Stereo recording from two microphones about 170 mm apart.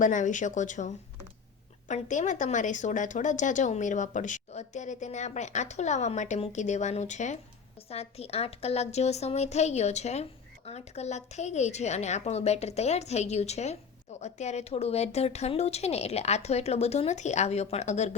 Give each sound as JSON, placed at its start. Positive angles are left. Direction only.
{"t": 0.0, "sound": "a woman's voice", "side_deg": 50}